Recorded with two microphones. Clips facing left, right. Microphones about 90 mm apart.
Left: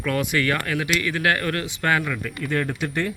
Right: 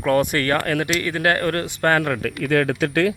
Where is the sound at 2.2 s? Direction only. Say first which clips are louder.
Right 6 dB; 90° right.